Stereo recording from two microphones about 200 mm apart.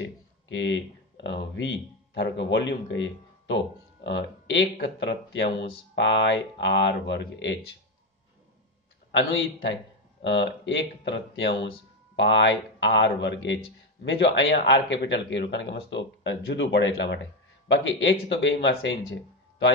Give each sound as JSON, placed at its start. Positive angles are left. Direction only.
{"t": 0.0, "sound": "speech", "side_deg": 65}
{"t": 9.1, "sound": "speech", "side_deg": 65}